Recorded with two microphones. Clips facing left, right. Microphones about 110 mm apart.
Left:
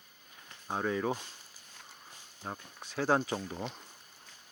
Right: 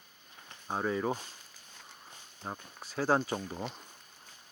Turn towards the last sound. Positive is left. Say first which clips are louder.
# even
turn(degrees=-5)  # may be behind; listen again after turning